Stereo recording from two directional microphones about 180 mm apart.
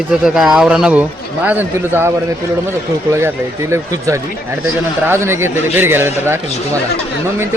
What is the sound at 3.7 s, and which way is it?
Speech, 15° right (ahead or behind).